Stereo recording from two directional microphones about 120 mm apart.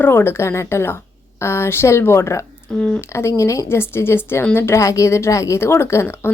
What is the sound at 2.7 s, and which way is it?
Speech, 5° left (ahead or behind).